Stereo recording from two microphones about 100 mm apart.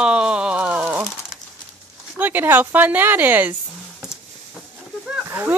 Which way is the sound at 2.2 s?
20° right (ahead or behind).